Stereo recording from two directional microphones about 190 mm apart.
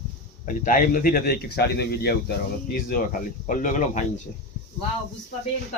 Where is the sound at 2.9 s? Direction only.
45° left (ahead or behind).